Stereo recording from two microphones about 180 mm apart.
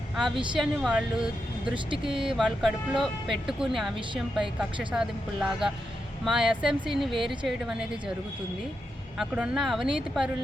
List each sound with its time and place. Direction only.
0.3 s speech: 25° right (ahead or behind)
0.6 s speech: 5° right (ahead or behind)
9.1 s speech: 5° right (ahead or behind)